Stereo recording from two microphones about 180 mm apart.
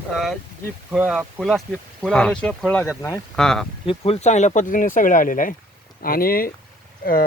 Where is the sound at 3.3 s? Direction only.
5° left (ahead or behind).